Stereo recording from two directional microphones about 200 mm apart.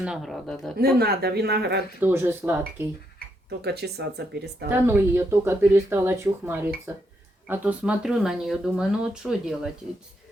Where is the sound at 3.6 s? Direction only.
55° right (ahead or behind).